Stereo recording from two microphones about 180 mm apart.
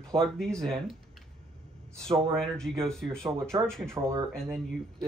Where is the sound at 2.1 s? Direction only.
5° left (ahead or behind).